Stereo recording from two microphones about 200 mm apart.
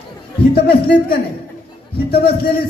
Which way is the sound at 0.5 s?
50° left (ahead or behind).